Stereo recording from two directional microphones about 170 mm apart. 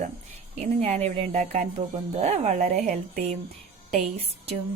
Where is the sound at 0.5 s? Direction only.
40° right (ahead or behind).